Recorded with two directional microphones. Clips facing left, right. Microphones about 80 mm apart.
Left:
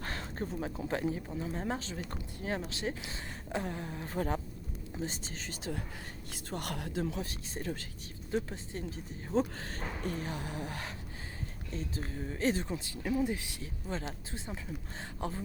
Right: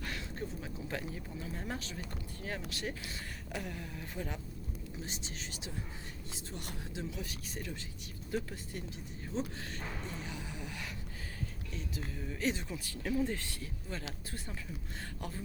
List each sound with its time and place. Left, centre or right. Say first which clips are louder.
0.0 s a sound: left 3 dB; left
0.9 s speech: left 7 dB; left
6.3 s speech: left 8 dB; left
6.9 s speech: left 6 dB; left
7.3 s speech: left 4 dB; left
8.3 s speech: left 3 dB; left
9.3 s speech: left 7 dB; left
12.7 s speech: left 2 dB; left